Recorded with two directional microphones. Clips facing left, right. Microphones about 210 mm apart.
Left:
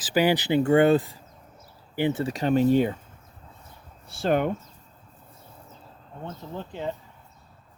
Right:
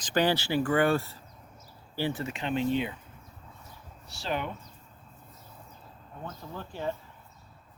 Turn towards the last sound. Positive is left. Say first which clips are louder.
# left 2 dB
turn(degrees=20)  # may be behind; listen again after turning